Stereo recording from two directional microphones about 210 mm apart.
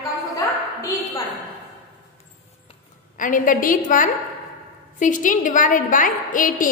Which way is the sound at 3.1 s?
40° left (ahead or behind).